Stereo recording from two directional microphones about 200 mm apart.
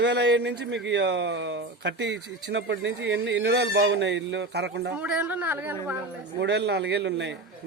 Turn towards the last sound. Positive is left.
turn(degrees=-60)  # may be behind; listen again after turning